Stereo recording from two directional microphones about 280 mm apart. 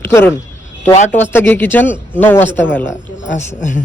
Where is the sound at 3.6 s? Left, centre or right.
Left.